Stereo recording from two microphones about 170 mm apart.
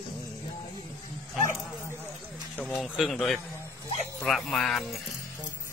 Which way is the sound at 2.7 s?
Centre (ahead or behind).